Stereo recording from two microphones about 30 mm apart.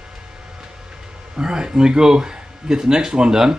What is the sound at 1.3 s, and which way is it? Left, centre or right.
Speech, right.